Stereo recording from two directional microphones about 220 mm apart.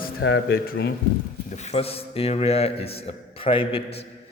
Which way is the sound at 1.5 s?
30° left (ahead or behind).